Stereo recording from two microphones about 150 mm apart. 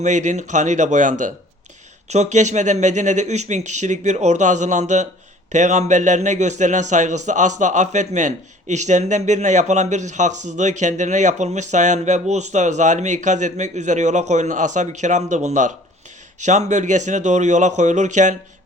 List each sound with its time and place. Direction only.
0.0 s a man's voice: 55° right (ahead or behind)